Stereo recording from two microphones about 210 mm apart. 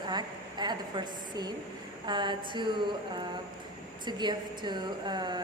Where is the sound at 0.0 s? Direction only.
20° right (ahead or behind).